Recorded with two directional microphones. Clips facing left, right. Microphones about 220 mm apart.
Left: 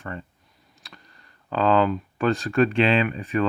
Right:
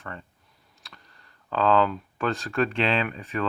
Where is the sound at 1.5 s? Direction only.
5° left (ahead or behind).